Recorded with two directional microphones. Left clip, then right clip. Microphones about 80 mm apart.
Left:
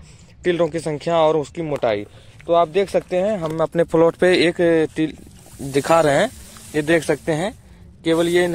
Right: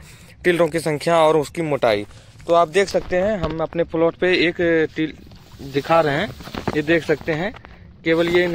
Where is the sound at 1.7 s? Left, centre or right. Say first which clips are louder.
Right 2 dB; right.